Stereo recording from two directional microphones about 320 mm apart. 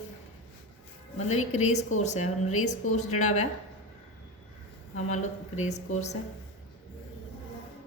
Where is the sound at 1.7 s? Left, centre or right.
Left.